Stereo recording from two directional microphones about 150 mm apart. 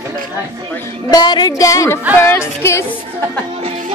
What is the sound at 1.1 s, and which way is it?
A woman's voice, 30° left (ahead or behind).